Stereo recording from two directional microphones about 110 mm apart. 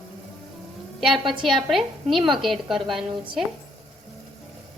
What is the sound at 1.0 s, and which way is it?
A woman's voice, centre (ahead or behind).